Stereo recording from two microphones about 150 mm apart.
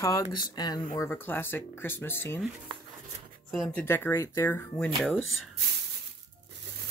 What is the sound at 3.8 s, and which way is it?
Speech, 15° left (ahead or behind).